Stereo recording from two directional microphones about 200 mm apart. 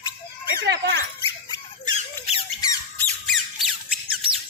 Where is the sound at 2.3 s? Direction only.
30° left (ahead or behind).